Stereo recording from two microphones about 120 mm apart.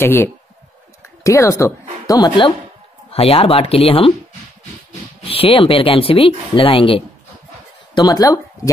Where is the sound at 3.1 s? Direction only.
55° left (ahead or behind).